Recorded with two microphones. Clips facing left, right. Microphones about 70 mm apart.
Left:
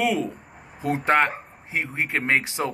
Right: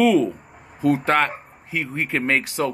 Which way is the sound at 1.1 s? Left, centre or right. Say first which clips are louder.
Even; centre.